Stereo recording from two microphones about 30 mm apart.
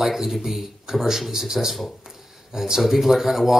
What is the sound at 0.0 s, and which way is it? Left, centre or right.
Speech, centre.